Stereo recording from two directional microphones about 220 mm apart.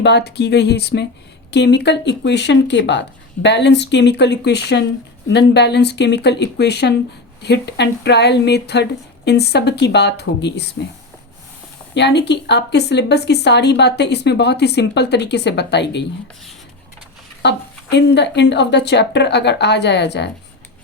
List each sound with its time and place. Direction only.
0.0 s speech: 50° left (ahead or behind)
11.9 s speech: 50° left (ahead or behind)
17.4 s speech: 50° left (ahead or behind)